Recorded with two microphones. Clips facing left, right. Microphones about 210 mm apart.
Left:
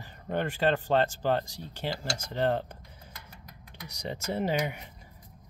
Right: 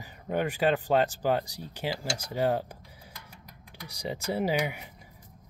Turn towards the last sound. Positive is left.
turn(degrees=-5)  # may be behind; listen again after turning